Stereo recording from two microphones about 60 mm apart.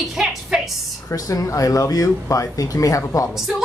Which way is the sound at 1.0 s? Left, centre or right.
Left.